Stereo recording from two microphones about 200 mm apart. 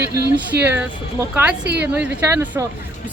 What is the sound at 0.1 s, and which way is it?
Speech, 15° right (ahead or behind).